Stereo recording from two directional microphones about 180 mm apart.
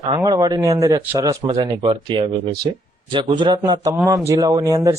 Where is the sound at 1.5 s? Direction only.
30° right (ahead or behind).